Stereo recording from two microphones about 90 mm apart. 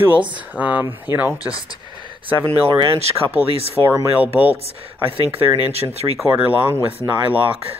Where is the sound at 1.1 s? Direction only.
50° left (ahead or behind).